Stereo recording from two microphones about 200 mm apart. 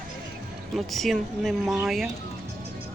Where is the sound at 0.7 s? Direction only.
Centre (ahead or behind).